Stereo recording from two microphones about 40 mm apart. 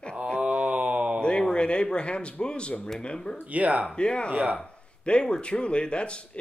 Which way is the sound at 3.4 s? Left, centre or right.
Right.